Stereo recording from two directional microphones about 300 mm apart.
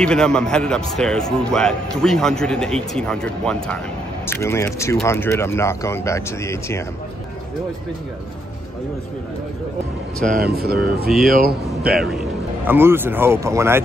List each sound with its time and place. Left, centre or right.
0.0 s a man's voice: centre
10.6 s speech: right
11.1 s a man's voice: centre